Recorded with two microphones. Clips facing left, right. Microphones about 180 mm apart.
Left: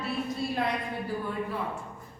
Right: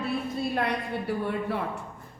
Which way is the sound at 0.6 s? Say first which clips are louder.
Right 2 dB; 70° right (ahead or behind).